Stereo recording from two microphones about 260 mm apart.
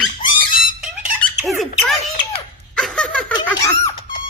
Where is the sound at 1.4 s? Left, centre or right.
Centre.